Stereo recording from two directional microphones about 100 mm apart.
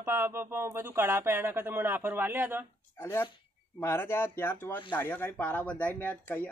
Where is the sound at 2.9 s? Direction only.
25° left (ahead or behind).